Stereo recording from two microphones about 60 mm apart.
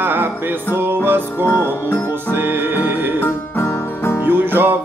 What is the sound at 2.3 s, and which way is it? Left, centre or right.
Music, right.